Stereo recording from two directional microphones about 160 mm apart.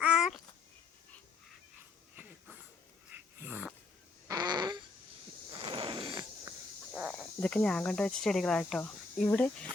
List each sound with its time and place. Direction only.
0.0 s a sound: 5° right (ahead or behind)
2.2 s wheeze: 15° right (ahead or behind)
3.2 s dog: 10° right (ahead or behind)
4.3 s fart: 25° right (ahead or behind)
5.5 s a sound: 35° right (ahead or behind)
7.1 s speech: 5° left (ahead or behind)